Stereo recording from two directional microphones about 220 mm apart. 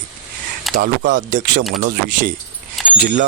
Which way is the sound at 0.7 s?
Centre (ahead or behind).